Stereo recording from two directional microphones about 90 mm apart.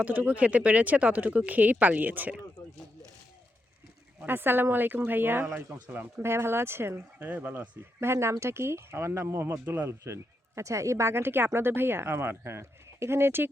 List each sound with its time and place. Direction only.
0.0 s speech: 15° right (ahead or behind)
4.3 s speech: 25° right (ahead or behind)